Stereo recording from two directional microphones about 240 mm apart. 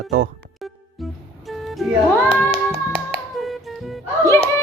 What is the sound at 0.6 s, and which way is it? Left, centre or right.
Music, centre.